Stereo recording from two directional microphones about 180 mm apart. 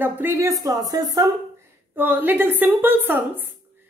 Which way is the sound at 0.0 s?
10° right (ahead or behind).